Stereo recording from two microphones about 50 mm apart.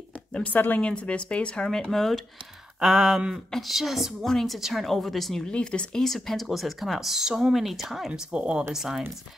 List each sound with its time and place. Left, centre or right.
0.3 s speech: left
0.7 s speech: left; by 2.2 s centre
2.8 s speech: centre
4.3 s a woman's voice: centre
4.6 s speech: centre
4.8 s speech: centre
5.5 s speech: centre
6.0 s speech: centre
8.1 s speech: right
8.7 s speech: centre